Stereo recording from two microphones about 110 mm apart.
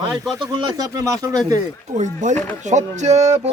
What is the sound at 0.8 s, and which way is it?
Speech, 35° right (ahead or behind).